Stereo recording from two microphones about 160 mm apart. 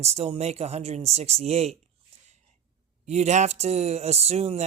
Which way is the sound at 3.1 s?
45° right (ahead or behind).